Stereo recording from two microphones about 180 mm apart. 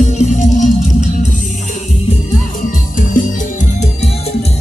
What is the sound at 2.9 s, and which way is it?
Music, 45° left (ahead or behind).